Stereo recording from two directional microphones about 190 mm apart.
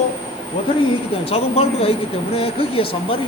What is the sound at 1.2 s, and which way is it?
Speech, 30° left (ahead or behind).